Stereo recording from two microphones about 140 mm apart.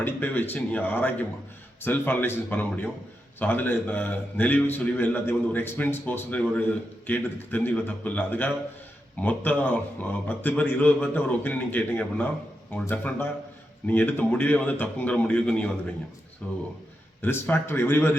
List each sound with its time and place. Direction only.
0.0 s a man's voice: 15° left (ahead or behind)